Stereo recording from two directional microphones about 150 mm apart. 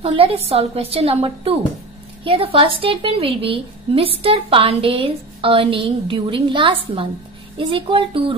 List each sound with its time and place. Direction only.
0.0 s a woman's voice: 40° right (ahead or behind)